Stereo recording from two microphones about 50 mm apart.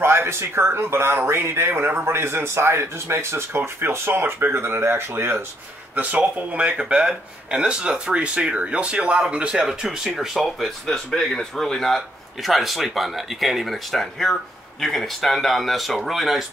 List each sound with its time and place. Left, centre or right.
0.0 s speech: right
5.9 s a man's voice: right; by 10.7 s centre
10.9 s a man's voice: centre